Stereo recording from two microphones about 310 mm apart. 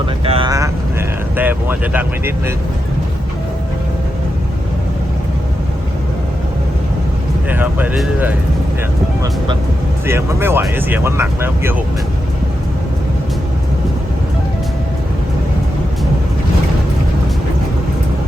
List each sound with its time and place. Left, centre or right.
0.3 s speech: centre
7.5 s speech: centre
10.1 s speech: centre